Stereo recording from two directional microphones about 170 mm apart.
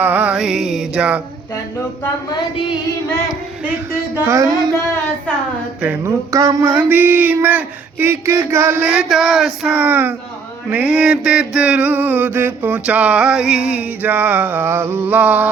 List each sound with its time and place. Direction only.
0.0 s music: 10° right (ahead or behind)
4.3 s mantra: 20° right (ahead or behind)
5.8 s mantra: 15° right (ahead or behind)